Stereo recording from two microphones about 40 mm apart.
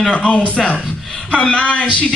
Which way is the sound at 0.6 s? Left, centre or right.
Centre.